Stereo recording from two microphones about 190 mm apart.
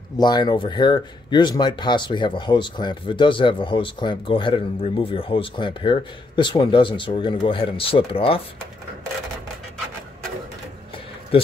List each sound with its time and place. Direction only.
0.2 s speech: 20° left (ahead or behind)